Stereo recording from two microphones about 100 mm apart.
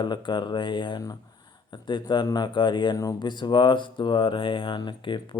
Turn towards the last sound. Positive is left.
turn(degrees=50)  # may be behind; listen again after turning